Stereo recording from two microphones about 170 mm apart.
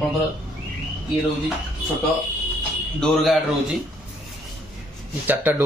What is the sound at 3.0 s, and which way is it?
Speech, centre (ahead or behind).